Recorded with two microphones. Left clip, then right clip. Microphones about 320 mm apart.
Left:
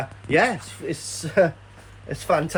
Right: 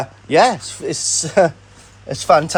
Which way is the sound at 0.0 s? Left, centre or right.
Centre.